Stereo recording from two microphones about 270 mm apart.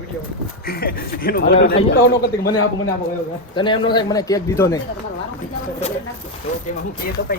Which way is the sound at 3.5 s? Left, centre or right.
Centre.